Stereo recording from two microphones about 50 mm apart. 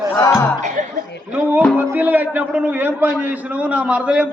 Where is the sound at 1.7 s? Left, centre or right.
Right.